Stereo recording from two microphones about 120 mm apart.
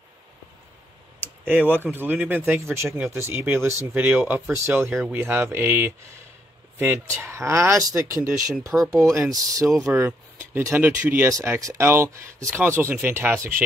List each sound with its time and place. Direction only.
1.7 s speech: 15° right (ahead or behind)